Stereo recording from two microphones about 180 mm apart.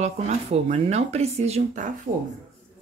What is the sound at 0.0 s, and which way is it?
Speech, 40° right (ahead or behind).